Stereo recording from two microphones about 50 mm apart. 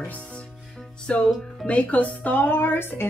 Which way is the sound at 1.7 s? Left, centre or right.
Left.